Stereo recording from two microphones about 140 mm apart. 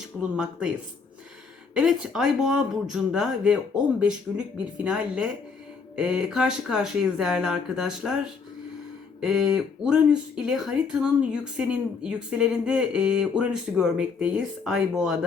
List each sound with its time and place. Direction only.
0.0 s speech: 5° right (ahead or behind)
1.7 s speech: 5° right (ahead or behind)
9.2 s speech: 5° right (ahead or behind)